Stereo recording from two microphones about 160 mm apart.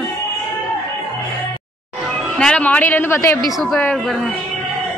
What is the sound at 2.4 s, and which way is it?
A woman's voice, 5° left (ahead or behind).